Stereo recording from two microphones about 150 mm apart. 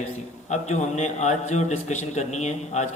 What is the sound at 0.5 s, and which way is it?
A man's voice, 50° left (ahead or behind).